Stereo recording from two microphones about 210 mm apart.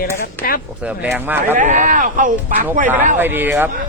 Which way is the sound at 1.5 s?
35° right (ahead or behind).